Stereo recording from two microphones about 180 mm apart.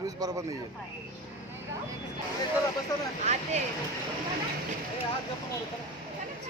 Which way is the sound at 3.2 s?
40° right (ahead or behind).